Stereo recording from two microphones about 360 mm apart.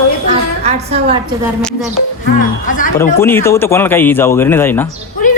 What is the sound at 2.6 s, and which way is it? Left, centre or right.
Speech, left.